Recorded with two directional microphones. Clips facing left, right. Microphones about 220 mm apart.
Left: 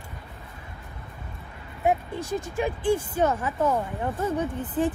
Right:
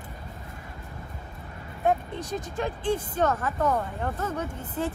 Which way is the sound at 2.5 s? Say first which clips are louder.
Left 3 dB; 15° left (ahead or behind).